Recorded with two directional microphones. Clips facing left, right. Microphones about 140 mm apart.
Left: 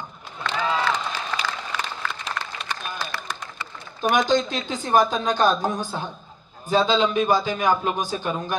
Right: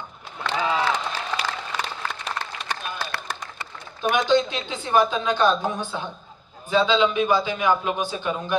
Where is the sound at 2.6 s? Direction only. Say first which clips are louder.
Right 1 dB; 60° right (ahead or behind).